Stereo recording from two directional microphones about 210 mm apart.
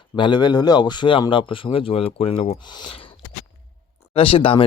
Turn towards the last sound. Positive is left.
turn(degrees=25)  # may be behind; listen again after turning